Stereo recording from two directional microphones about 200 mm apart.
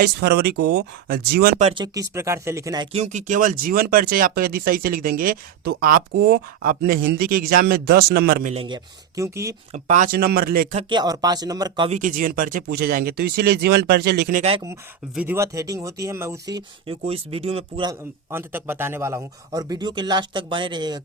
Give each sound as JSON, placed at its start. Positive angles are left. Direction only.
{"t": 0.0, "sound": "speech", "side_deg": -55}
{"t": 1.5, "sound": "speech", "side_deg": -35}
{"t": 1.8, "sound": "speech", "side_deg": -15}
{"t": 3.0, "sound": "speech", "side_deg": -35}
{"t": 8.5, "sound": "speech", "side_deg": -25}
{"t": 9.7, "sound": "speech", "side_deg": -35}
{"t": 10.8, "sound": "speech", "side_deg": -25}
{"t": 11.9, "sound": "speech", "side_deg": -40}
{"t": 15.1, "sound": "speech", "side_deg": -10}
{"t": 17.1, "sound": "speech", "side_deg": -30}
{"t": 18.3, "sound": "speech", "side_deg": -10}